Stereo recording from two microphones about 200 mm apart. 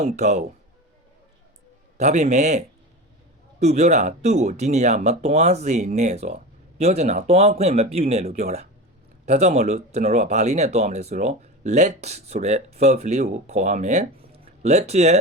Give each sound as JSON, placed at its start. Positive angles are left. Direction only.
{"t": 0.0, "sound": "speech", "side_deg": -35}
{"t": 2.0, "sound": "speech", "side_deg": -35}